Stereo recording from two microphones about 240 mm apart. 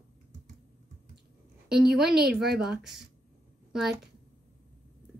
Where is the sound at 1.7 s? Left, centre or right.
Centre.